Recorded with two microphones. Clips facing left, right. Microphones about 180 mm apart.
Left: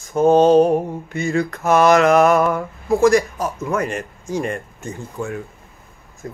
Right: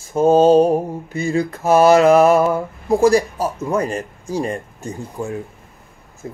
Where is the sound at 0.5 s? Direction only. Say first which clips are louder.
Right 1 dB; 30° right (ahead or behind).